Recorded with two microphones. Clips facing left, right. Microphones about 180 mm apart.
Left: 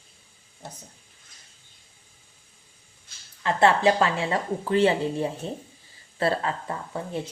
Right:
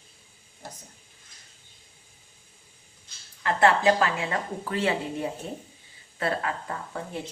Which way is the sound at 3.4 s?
25° left (ahead or behind).